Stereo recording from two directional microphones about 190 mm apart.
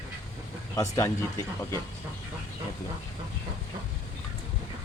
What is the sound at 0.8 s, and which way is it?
Speech, 15° left (ahead or behind).